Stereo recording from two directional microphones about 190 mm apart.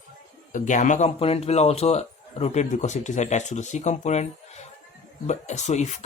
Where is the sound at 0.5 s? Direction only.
40° left (ahead or behind).